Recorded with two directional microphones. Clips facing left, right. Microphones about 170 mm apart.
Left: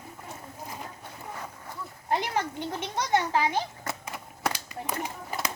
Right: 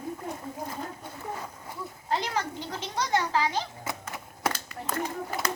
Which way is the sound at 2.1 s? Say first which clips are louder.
Left 1 dB; 20° left (ahead or behind).